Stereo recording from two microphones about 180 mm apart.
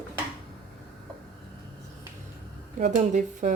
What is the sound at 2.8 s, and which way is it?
Speech, 40° right (ahead or behind).